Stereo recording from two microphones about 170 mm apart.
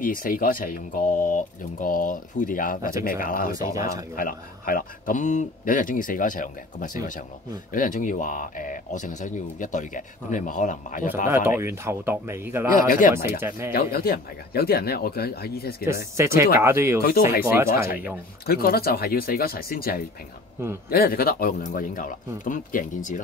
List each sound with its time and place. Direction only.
0.0 s speech: 55° left (ahead or behind)
3.5 s speech: 20° right (ahead or behind)
4.2 s speech: 55° left (ahead or behind)
11.2 s a man's voice: 15° right (ahead or behind)
12.7 s speech: 50° left (ahead or behind)
13.1 s a man's voice: 15° right (ahead or behind)
13.7 s speech: 60° left (ahead or behind)
15.8 s a man's voice: 15° right (ahead or behind)
17.6 s speech: 60° left (ahead or behind)